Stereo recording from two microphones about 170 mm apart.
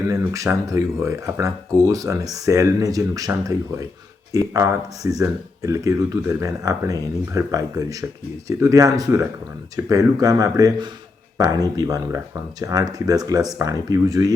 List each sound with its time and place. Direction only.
0.1 s speech: 20° right (ahead or behind)